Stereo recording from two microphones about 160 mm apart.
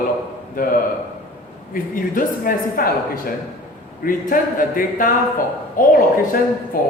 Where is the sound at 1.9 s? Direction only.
60° left (ahead or behind).